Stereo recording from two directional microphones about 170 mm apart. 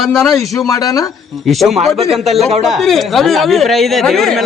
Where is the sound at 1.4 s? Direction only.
Centre (ahead or behind).